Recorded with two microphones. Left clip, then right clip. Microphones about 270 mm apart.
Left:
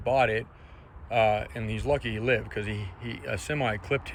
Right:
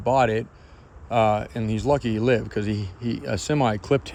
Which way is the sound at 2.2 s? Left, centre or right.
Centre.